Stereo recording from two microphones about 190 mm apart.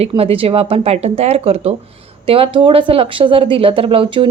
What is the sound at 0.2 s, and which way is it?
A woman's voice, 30° right (ahead or behind).